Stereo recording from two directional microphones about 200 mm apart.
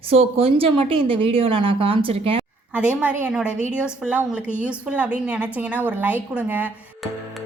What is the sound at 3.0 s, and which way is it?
A woman's voice, 5° right (ahead or behind).